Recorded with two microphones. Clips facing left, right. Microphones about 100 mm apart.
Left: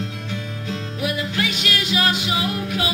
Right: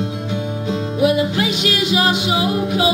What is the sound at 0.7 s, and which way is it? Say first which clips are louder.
Music: right 10 dB; 20° right (ahead or behind).